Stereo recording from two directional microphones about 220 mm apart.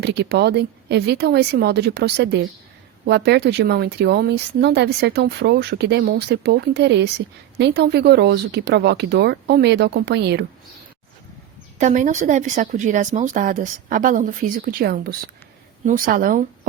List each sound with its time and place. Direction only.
0.0 s speech: 50° right (ahead or behind)
11.8 s speech: 35° right (ahead or behind)